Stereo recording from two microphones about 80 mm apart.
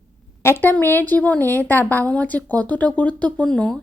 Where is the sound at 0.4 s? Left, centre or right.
Left.